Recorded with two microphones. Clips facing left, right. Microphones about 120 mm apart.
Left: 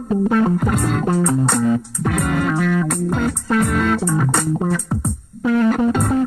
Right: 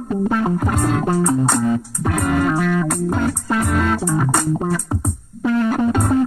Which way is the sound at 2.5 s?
15° right (ahead or behind).